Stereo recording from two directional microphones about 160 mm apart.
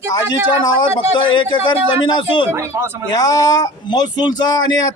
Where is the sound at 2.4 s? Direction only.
15° right (ahead or behind).